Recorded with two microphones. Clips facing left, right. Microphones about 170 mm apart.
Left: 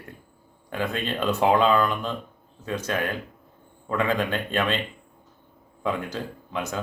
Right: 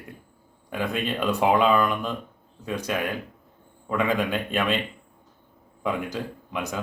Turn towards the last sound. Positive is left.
turn(degrees=-15)  # may be behind; listen again after turning